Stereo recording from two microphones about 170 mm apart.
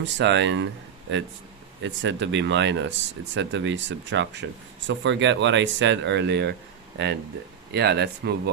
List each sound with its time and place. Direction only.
0.0 s speech: 90° right
1.8 s speech: 90° right; by 8.4 s 75° right (ahead or behind)